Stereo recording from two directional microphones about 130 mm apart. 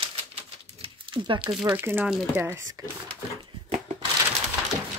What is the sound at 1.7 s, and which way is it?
Speech, 15° right (ahead or behind).